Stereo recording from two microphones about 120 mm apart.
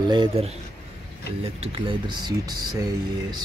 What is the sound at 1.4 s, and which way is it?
Speech, 55° right (ahead or behind).